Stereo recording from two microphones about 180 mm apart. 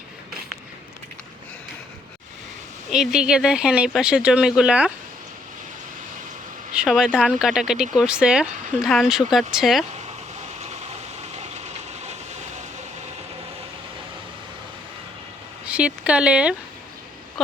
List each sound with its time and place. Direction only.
2.9 s speech: 5° right (ahead or behind)
6.7 s speech: centre (ahead or behind)
11.3 s vehicle: 40° right (ahead or behind)
15.6 s speech: 5° right (ahead or behind)